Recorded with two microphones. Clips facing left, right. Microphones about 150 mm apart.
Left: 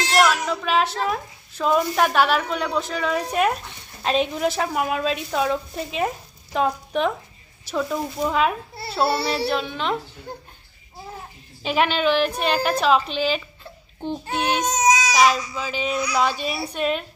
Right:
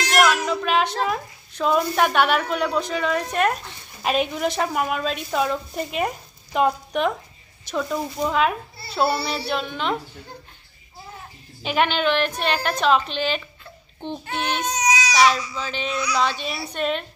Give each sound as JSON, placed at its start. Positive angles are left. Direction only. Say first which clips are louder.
{"t": 0.2, "sound": "a sound", "louder": "right 1 dB", "side_deg": 0}
{"t": 1.0, "sound": "a woman's voice", "louder": "even", "side_deg": 0}
{"t": 11.6, "sound": "a woman's voice", "louder": "left 1 dB", "side_deg": 0}
{"t": 14.7, "sound": "baby cry", "louder": "left 3 dB", "side_deg": 45}
{"t": 15.1, "sound": "a child's voice", "louder": "even", "side_deg": 5}